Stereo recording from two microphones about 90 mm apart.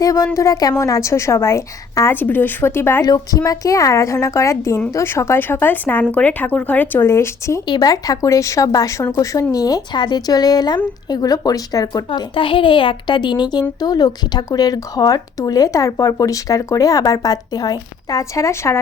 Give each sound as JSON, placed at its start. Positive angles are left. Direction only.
{"t": 0.0, "sound": "a woman's voice", "side_deg": 40}
{"t": 2.1, "sound": "speech", "side_deg": 20}
{"t": 3.0, "sound": "a woman's voice", "side_deg": 45}
{"t": 7.7, "sound": "a woman's voice", "side_deg": 45}
{"t": 12.3, "sound": "speech", "side_deg": 70}